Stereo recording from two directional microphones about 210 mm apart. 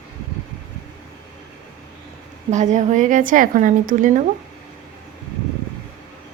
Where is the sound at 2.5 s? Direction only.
35° right (ahead or behind).